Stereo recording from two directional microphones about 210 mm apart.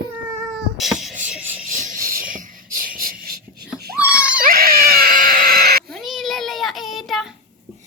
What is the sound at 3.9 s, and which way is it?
Baby cry, 5° right (ahead or behind).